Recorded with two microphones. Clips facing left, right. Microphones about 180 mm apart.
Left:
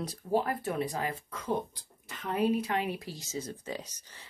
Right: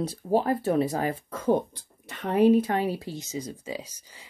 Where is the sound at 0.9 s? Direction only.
45° right (ahead or behind).